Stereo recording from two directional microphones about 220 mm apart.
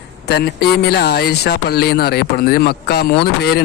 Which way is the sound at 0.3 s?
45° left (ahead or behind).